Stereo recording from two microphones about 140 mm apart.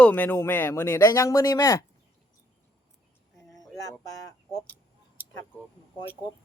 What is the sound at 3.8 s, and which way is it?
Speech, 25° left (ahead or behind).